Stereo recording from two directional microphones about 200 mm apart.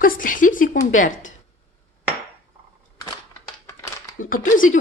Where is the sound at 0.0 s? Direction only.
45° left (ahead or behind).